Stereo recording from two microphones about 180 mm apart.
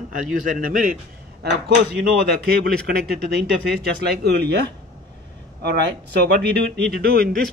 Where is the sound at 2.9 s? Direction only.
60° right (ahead or behind).